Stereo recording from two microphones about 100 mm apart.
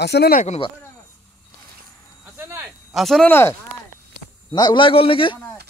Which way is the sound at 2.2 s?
25° right (ahead or behind).